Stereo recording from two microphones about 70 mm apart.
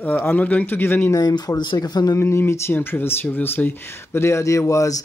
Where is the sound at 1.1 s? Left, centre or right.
Left.